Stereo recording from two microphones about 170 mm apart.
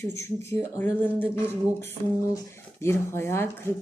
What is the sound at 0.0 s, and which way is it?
Speech, 15° left (ahead or behind).